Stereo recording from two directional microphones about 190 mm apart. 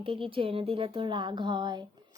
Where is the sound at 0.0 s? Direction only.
30° right (ahead or behind).